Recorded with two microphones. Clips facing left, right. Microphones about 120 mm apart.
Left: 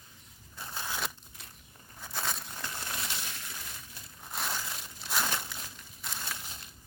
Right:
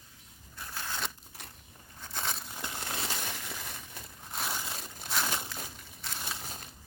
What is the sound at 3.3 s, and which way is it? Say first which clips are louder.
Crushing: right 4 dB; 60° right (ahead or behind).